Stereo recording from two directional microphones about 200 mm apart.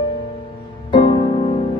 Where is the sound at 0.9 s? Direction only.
25° left (ahead or behind).